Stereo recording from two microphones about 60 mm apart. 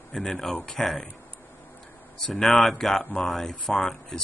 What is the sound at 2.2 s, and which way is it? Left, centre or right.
Speech, centre.